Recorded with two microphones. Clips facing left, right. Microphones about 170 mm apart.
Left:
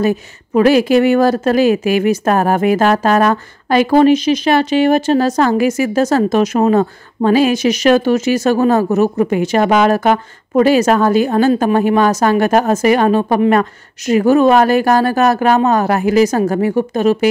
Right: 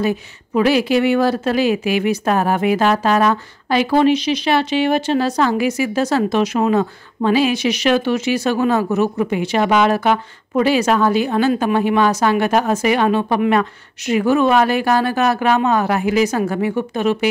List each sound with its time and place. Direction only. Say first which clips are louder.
0.0 s speech: left 4 dB; 45° left (ahead or behind)